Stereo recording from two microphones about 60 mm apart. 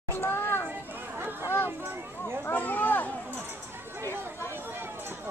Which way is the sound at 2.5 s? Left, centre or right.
Left.